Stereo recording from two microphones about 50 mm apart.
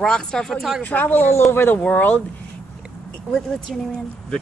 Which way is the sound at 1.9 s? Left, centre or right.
Left.